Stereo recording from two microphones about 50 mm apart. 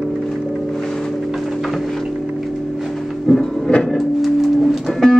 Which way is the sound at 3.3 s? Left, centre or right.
Centre.